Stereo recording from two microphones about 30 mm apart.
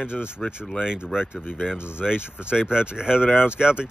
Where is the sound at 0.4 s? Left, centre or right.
Left.